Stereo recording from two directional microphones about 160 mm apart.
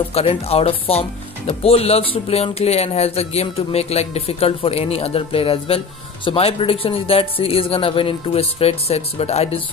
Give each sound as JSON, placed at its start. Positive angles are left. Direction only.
{"t": 0.1, "sound": "speech", "side_deg": 40}